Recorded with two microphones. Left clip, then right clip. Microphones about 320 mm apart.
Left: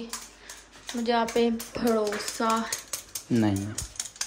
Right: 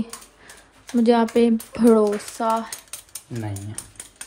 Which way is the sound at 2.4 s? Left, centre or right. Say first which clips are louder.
Right 4 dB; centre.